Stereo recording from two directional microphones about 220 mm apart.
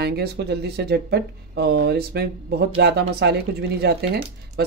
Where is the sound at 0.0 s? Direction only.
45° right (ahead or behind).